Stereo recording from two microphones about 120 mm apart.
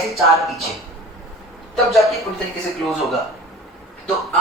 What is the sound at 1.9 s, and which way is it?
A man's voice, centre (ahead or behind).